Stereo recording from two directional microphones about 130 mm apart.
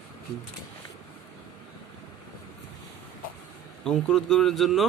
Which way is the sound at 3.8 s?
5° left (ahead or behind).